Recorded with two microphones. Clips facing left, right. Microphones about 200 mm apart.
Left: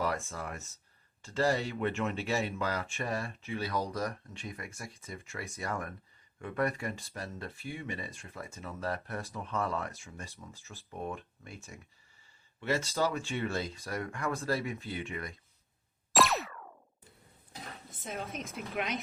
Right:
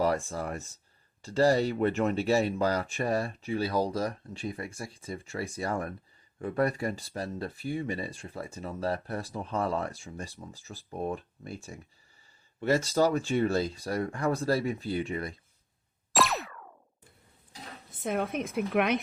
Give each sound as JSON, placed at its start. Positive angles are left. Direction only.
{"t": 0.0, "sound": "speech", "side_deg": -35}
{"t": 16.1, "sound": "boing", "side_deg": 0}
{"t": 18.0, "sound": "speech", "side_deg": -60}